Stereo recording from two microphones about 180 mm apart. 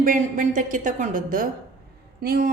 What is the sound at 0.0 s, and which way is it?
A woman's voice, 45° right (ahead or behind).